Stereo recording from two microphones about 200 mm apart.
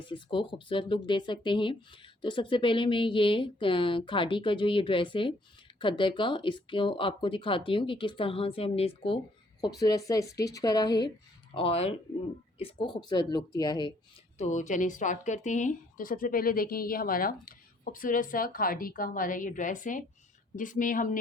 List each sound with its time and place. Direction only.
0.1 s speech: 25° left (ahead or behind)
14.3 s speech: 35° left (ahead or behind)